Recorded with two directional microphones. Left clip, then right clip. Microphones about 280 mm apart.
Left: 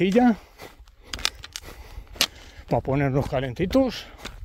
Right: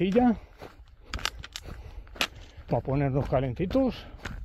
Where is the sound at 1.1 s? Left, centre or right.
Left.